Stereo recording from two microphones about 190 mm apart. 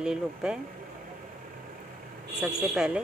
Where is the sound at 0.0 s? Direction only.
5° right (ahead or behind).